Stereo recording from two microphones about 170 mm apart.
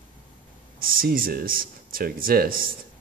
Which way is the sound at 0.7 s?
60° right (ahead or behind).